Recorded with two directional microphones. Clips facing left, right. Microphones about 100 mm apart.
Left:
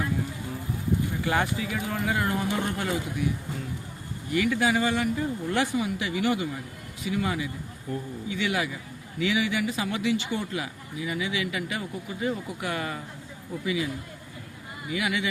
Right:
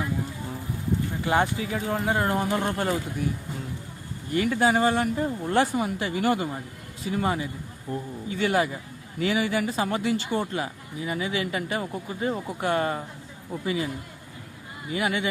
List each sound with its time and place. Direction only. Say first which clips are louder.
1.2 s speech: right 3 dB; 25° right (ahead or behind)
4.4 s a man's voice: right 2 dB; 35° right (ahead or behind)
8.3 s speech: right 5 dB; 40° right (ahead or behind)